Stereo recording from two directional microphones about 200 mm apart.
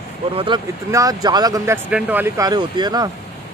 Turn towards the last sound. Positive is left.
turn(degrees=-20)  # may be behind; listen again after turning